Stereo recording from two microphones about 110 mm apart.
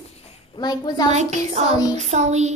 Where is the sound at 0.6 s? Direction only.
40° left (ahead or behind).